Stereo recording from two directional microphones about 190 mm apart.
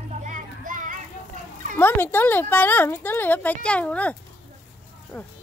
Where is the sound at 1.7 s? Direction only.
10° left (ahead or behind).